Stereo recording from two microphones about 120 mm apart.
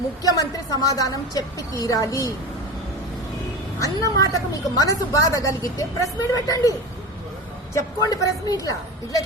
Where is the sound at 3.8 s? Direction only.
30° left (ahead or behind).